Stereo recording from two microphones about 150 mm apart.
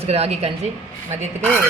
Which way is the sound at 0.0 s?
45° right (ahead or behind).